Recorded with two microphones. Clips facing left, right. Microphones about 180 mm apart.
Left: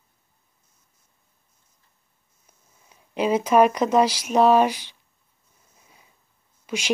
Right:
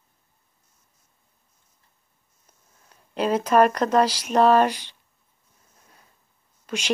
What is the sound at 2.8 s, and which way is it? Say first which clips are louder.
Speech: left 1 dB; 10° left (ahead or behind).